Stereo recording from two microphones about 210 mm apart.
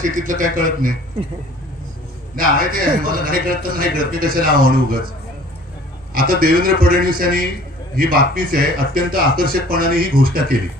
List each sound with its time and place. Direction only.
0.0 s speech: 40° right (ahead or behind)
2.3 s speech: 40° right (ahead or behind)
6.1 s speech: 45° right (ahead or behind)